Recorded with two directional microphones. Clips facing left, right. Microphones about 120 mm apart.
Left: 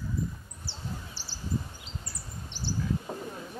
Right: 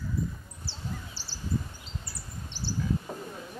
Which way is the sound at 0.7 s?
15° left (ahead or behind).